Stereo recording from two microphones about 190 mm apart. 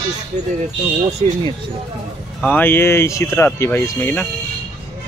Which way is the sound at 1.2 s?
30° right (ahead or behind).